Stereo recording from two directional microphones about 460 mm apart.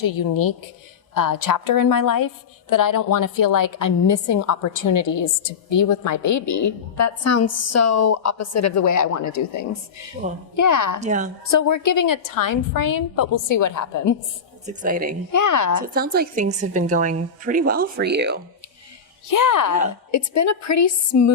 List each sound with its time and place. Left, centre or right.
0.0 s a woman's voice: left
10.2 s a woman's voice: centre
10.6 s a woman's voice: left
11.0 s a woman's voice: centre
11.9 s a woman's voice: left
14.7 s a woman's voice: centre
15.3 s a woman's voice: left
15.8 s a woman's voice: centre
19.3 s a woman's voice: left